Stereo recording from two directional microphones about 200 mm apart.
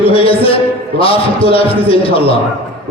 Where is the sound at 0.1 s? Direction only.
25° left (ahead or behind).